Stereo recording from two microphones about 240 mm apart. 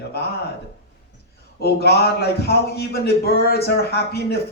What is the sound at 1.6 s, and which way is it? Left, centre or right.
A man's voice, left.